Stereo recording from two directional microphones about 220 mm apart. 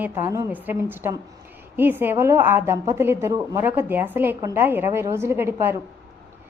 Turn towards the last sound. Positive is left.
turn(degrees=-10)  # may be behind; listen again after turning